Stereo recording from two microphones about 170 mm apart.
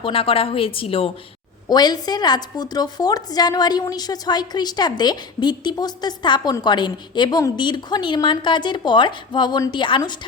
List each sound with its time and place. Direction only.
0.0 s a woman's voice: 30° left (ahead or behind)